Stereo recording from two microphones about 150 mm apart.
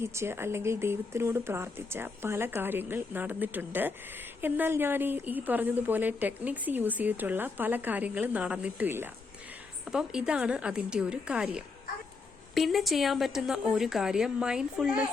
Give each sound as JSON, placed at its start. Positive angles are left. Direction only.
{"t": 0.0, "sound": "a woman's voice", "side_deg": -15}